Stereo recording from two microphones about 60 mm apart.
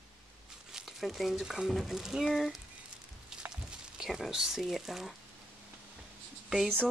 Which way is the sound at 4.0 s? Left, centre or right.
Centre.